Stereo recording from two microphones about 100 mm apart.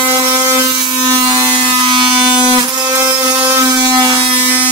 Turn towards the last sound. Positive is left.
turn(degrees=-50)  # may be behind; listen again after turning